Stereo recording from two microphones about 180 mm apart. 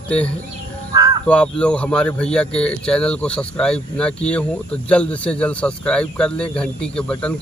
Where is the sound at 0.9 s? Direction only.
20° right (ahead or behind).